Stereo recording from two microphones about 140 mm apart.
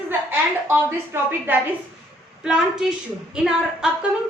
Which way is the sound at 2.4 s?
5° right (ahead or behind).